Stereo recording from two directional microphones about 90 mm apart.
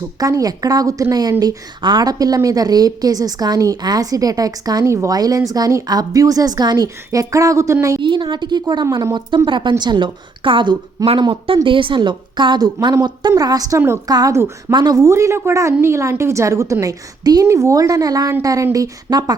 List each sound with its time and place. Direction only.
0.2 s a woman's voice: 40° right (ahead or behind)
8.0 s a woman's voice: 60° right (ahead or behind)
9.5 s a woman's voice: 60° right (ahead or behind); by 14.0 s 30° right (ahead or behind)
14.1 s a woman's voice: 45° right (ahead or behind)
14.9 s a woman's voice: 35° right (ahead or behind)
16.8 s a woman's voice: 45° right (ahead or behind)
17.4 s a woman's voice: 35° right (ahead or behind)